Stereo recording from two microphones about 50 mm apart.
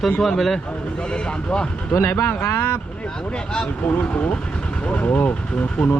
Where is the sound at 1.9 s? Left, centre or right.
Left.